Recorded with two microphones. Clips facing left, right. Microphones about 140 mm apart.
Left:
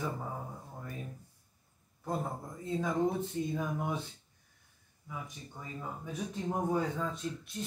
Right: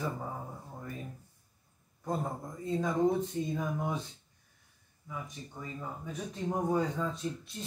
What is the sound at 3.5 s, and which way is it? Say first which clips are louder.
Speech: right 1 dB; 5° left (ahead or behind).